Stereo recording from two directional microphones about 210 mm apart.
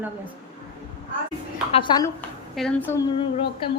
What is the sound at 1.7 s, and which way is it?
Speech, 25° left (ahead or behind).